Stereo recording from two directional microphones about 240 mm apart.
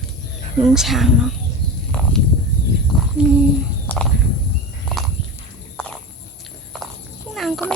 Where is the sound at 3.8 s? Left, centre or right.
Centre.